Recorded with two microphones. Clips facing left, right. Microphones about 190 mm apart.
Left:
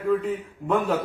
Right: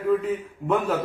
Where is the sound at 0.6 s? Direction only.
Centre (ahead or behind).